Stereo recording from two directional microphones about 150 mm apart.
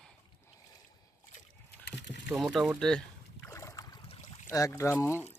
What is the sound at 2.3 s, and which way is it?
Speech, centre (ahead or behind).